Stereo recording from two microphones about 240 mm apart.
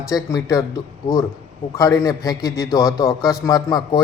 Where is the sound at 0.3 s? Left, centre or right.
Centre.